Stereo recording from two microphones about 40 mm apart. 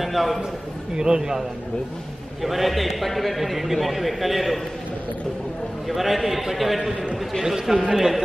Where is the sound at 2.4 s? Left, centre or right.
Centre.